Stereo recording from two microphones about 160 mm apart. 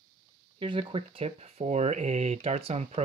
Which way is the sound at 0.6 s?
35° right (ahead or behind).